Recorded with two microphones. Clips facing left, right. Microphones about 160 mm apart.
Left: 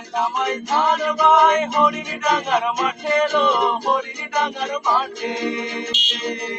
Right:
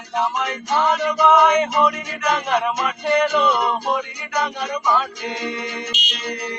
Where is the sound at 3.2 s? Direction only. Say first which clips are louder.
Left 2 dB; centre (ahead or behind).